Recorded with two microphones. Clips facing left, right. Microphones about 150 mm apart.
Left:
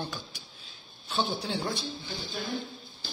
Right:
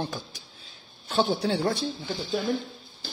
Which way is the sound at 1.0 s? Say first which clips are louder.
Right 7 dB; 70° right (ahead or behind).